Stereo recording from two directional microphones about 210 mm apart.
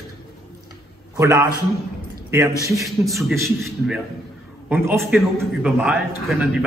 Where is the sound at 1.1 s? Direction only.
15° right (ahead or behind).